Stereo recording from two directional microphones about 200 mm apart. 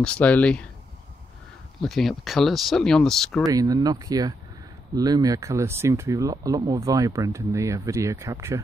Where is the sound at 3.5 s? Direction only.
20° right (ahead or behind).